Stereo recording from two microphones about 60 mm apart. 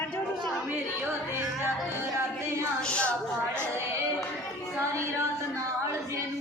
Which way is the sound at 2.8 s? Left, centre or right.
Centre.